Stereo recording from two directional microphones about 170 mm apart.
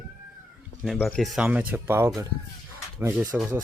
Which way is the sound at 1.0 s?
Centre (ahead or behind).